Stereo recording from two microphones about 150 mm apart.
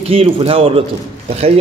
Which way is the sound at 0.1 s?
40° right (ahead or behind).